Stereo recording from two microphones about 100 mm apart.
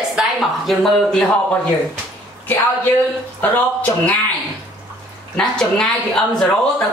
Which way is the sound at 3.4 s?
15° left (ahead or behind).